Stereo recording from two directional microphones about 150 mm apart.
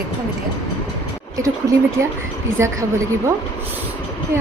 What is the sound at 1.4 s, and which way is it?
Speech, 20° right (ahead or behind).